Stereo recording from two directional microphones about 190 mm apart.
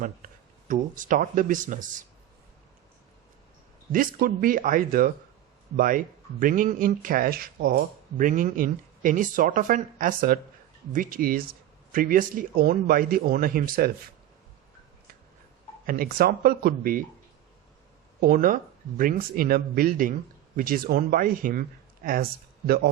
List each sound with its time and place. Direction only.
0.2 s a sound: 50° right (ahead or behind)
0.7 s speech: 45° right (ahead or behind)
3.9 s speech: 45° right (ahead or behind)
15.9 s speech: 50° right (ahead or behind)
18.2 s speech: 45° right (ahead or behind)